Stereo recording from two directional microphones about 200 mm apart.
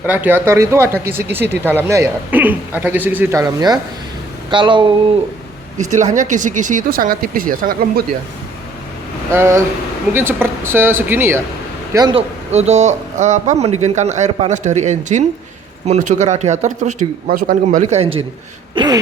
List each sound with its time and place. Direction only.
0.0 s speech: 10° right (ahead or behind)
5.7 s speech: 35° right (ahead or behind)
9.3 s speech: 15° right (ahead or behind)
12.5 s speech: 35° right (ahead or behind)
18.7 s throat clearing: 25° right (ahead or behind)